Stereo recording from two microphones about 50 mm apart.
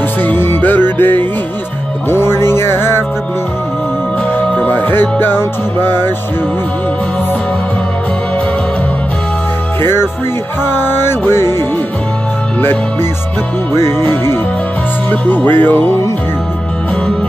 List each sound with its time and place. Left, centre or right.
0.2 s music: left
2.0 s music: left
4.4 s music: centre
4.6 s music: left
9.8 s music: left
13.7 s music: left
14.0 s music: left
15.0 s music: left